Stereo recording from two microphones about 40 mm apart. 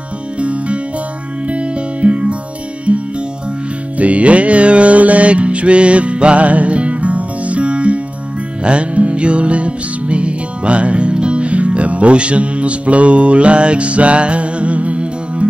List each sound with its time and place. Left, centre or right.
0.4 s music: right